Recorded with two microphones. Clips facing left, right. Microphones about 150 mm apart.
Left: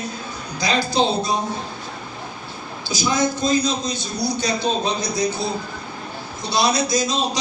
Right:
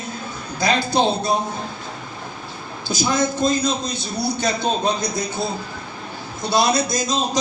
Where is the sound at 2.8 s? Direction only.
50° right (ahead or behind).